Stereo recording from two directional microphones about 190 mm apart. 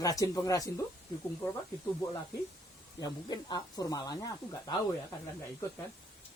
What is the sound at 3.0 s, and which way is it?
Speech, 20° left (ahead or behind).